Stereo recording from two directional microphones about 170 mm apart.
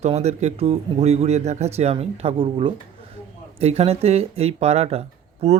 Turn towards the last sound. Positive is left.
turn(degrees=-35)  # may be behind; listen again after turning